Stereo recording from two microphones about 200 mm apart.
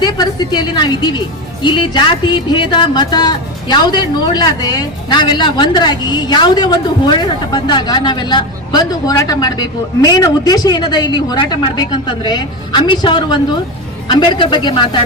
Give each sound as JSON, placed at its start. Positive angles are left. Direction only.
{"t": 0.0, "sound": "speech", "side_deg": 20}